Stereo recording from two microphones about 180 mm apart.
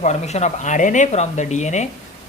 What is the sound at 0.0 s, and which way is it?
Speech, 40° left (ahead or behind).